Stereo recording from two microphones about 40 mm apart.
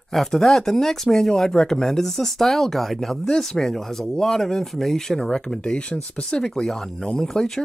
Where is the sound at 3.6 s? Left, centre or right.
Centre.